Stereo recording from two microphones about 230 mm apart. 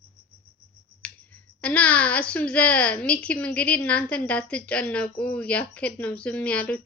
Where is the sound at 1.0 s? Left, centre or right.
Centre.